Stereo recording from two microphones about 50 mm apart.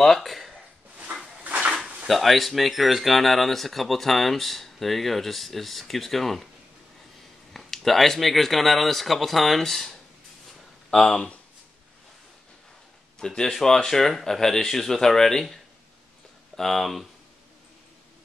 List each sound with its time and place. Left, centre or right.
0.0 s speech: centre
1.4 s a sound: right
2.0 s speech: centre
7.5 s speech: centre
13.2 s speech: centre
16.5 s speech: centre